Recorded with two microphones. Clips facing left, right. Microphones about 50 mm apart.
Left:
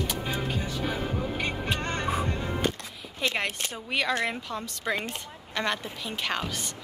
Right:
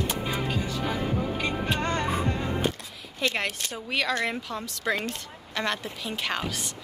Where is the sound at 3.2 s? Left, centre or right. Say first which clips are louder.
Right 1 dB; centre.